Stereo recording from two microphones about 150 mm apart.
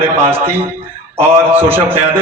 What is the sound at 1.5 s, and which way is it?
Speech, 15° right (ahead or behind).